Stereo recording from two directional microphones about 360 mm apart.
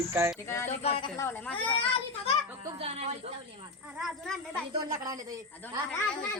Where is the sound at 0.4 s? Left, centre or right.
Centre.